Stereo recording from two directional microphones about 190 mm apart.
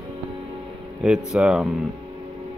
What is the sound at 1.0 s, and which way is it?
Speech, 5° right (ahead or behind).